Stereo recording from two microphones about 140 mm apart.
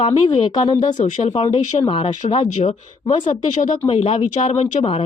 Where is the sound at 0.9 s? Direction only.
55° left (ahead or behind).